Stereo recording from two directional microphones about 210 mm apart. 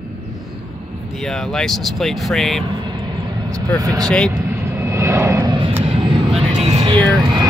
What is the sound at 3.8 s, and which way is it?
Speech, 15° right (ahead or behind).